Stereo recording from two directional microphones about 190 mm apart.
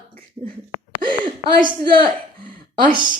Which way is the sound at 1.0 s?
25° right (ahead or behind).